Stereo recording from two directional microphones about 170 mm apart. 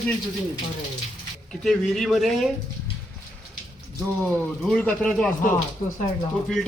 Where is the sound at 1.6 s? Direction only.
Centre (ahead or behind).